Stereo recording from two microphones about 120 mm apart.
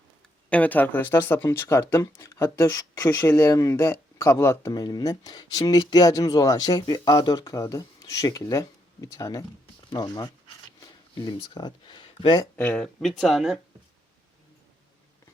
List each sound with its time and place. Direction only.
0.5 s speech: 15° left (ahead or behind); by 12.4 s 45° left (ahead or behind)
12.5 s speech: 10° left (ahead or behind)